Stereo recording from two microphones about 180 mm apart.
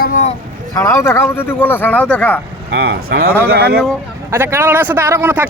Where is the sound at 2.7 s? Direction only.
60° right (ahead or behind).